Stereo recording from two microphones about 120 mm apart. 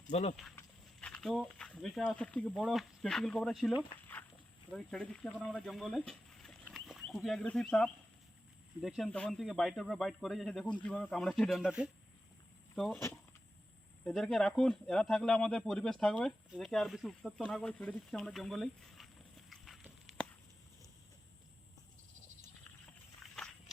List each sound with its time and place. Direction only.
0.1 s speech: 70° left (ahead or behind)
1.0 s speech: 5° left (ahead or behind)
4.0 s dog: 15° left (ahead or behind)
4.7 s speech: 5° left (ahead or behind)
9.0 s speech: 10° left (ahead or behind)
14.0 s speech: 5° left (ahead or behind)
19.5 s horse: centre (ahead or behind)
23.2 s a sound: 5° left (ahead or behind)